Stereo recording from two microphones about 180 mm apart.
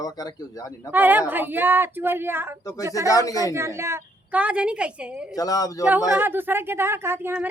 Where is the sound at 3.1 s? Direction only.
20° left (ahead or behind).